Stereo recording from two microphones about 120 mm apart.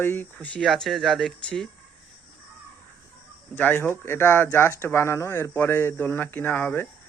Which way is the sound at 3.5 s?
15° left (ahead or behind).